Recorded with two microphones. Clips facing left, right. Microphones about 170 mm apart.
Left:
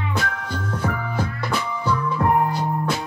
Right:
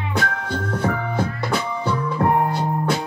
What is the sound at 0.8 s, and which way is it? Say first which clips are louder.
Music: right 3 dB; 30° right (ahead or behind).